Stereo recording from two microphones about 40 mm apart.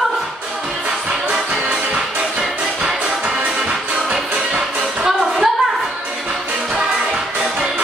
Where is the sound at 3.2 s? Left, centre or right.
Right.